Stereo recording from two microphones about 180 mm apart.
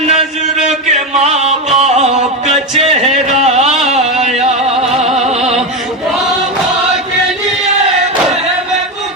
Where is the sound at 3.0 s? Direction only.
Centre (ahead or behind).